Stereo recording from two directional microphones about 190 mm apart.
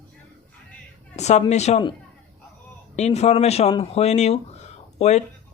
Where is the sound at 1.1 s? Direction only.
35° left (ahead or behind).